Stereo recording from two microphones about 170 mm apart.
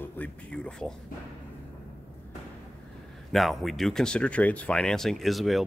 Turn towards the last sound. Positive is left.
turn(degrees=0)  # may be behind; listen again after turning